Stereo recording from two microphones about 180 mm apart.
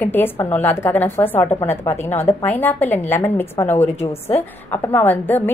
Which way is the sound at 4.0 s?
35° left (ahead or behind).